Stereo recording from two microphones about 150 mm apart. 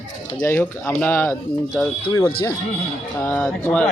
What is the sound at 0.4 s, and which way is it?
Speech, 15° left (ahead or behind).